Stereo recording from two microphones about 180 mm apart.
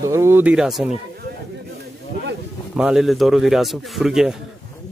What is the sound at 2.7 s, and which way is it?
Speech, 5° right (ahead or behind).